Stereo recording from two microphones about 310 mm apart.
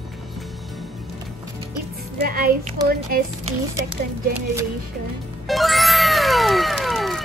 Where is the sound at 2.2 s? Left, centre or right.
Right.